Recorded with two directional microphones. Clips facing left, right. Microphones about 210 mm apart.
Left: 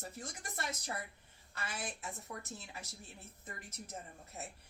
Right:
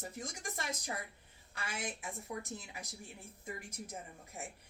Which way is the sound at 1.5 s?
15° right (ahead or behind).